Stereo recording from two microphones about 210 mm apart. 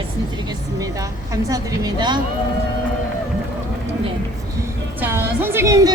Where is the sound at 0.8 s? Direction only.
15° right (ahead or behind).